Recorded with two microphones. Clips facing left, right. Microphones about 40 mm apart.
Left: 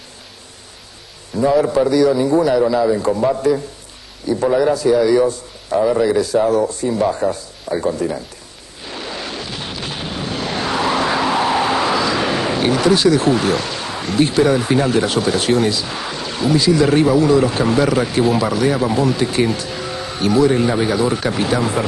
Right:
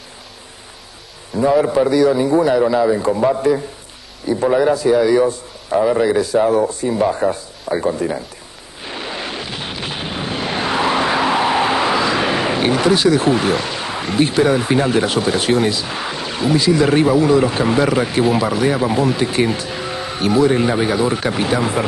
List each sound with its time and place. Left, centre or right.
1.4 s a man's voice: right
8.8 s artillery fire: right